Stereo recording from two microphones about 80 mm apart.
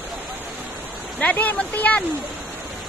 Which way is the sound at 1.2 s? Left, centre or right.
Left.